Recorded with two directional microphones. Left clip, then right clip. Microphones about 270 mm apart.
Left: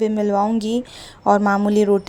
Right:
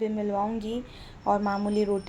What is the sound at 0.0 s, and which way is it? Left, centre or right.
A woman's voice, left.